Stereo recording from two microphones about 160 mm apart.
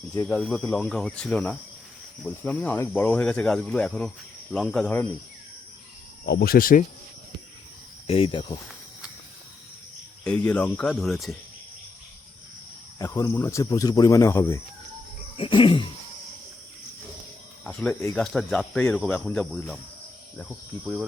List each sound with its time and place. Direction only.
0.3 s speech: 5° left (ahead or behind)
6.2 s cricket: 80° left; by 6.8 s 60° left (ahead or behind)
8.0 s speech: 35° left (ahead or behind)
10.2 s speech: 10° left (ahead or behind)
13.0 s speech: 20° left (ahead or behind)
15.4 s speech: 30° left (ahead or behind)
17.6 s speech: 10° left (ahead or behind)
18.2 s speech: centre (ahead or behind)